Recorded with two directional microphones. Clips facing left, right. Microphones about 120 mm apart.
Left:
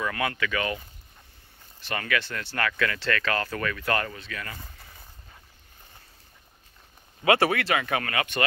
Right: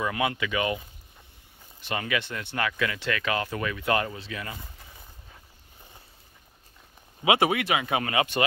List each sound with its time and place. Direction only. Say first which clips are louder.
0.0 s speech: right 1 dB; 20° right (ahead or behind)
7.2 s speech: left 1 dB; 15° right (ahead or behind)